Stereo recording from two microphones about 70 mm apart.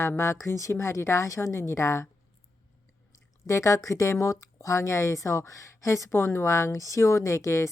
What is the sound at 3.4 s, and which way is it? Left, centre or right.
Speech, left.